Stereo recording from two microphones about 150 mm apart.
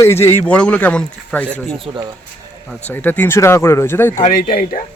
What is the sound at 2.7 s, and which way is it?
Speech, 10° left (ahead or behind).